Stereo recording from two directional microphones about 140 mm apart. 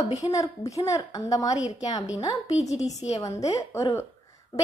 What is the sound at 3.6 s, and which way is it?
Speech, 20° left (ahead or behind).